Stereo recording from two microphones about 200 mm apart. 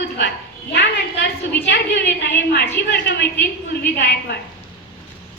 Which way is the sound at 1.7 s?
60° left (ahead or behind).